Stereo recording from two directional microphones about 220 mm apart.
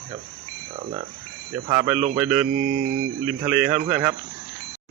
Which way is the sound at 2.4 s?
45° right (ahead or behind).